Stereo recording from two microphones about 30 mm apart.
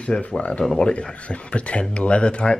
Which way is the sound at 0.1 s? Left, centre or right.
Left.